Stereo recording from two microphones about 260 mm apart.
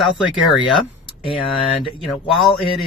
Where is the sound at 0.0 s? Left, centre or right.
Centre.